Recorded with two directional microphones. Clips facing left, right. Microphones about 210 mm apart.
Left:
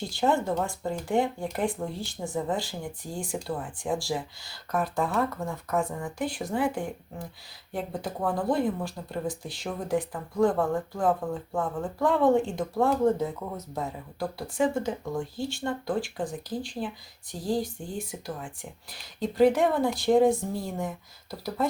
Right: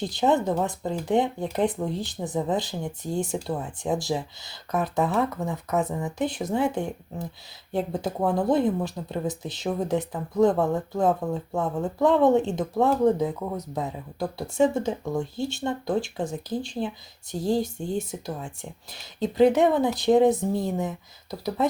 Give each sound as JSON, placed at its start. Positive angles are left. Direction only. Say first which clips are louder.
{"t": 0.1, "sound": "speech", "louder": "right 2 dB", "side_deg": -20}